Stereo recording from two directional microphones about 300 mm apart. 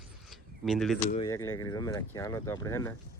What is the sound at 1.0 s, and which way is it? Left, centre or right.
Speech, left.